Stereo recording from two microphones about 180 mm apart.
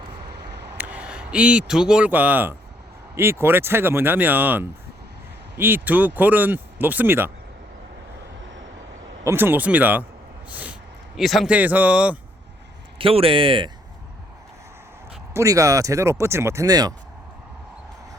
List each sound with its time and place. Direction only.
0.3 s a sound: 70° right (ahead or behind)
0.8 s speech: 5° right (ahead or behind)
9.2 s speech: 10° right (ahead or behind)
10.5 s a sound: 10° right (ahead or behind)
11.2 s speech: centre (ahead or behind)
13.0 s speech: 30° right (ahead or behind)
15.3 s speech: 15° right (ahead or behind)